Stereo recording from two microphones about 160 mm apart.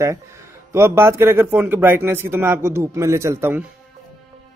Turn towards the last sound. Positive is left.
turn(degrees=-15)  # may be behind; listen again after turning